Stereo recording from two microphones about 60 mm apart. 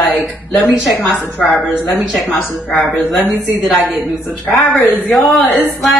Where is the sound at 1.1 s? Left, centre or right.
Left.